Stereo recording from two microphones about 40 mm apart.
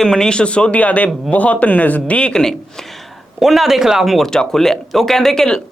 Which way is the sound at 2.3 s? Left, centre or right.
Centre.